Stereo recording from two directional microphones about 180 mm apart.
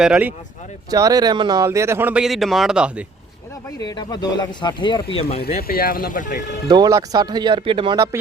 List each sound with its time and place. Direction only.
0.0 s speech: 5° right (ahead or behind)
0.9 s speech: 20° right (ahead or behind); by 2.9 s 5° right (ahead or behind)
3.8 s speech: 25° left (ahead or behind)
5.5 s speech: 55° left (ahead or behind)
6.7 s speech: 20° right (ahead or behind)